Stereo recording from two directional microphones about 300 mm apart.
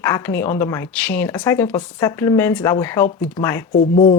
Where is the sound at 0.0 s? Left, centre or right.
Centre.